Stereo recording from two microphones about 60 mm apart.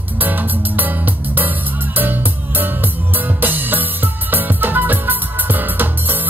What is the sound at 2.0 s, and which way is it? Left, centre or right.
Music, right.